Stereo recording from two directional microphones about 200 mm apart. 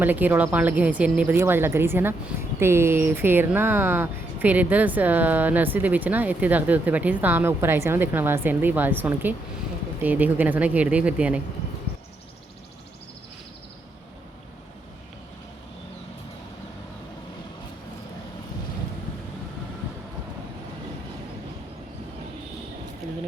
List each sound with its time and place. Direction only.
0.0 s speech: 10° right (ahead or behind)